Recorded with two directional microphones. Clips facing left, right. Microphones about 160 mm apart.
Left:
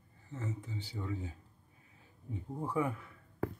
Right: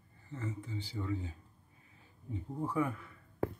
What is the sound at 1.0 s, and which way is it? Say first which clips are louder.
Speech: right 2 dB; 15° left (ahead or behind).